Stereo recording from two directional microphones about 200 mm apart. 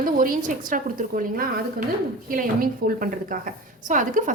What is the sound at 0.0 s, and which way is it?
A woman's voice, 45° right (ahead or behind).